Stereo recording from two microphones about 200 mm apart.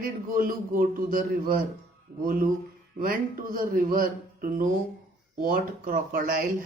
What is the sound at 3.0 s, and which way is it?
A man's voice, 45° right (ahead or behind).